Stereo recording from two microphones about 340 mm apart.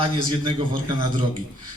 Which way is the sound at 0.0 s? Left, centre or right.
Centre.